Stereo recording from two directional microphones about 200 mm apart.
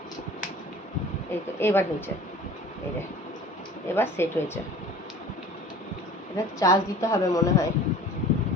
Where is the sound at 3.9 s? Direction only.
10° left (ahead or behind).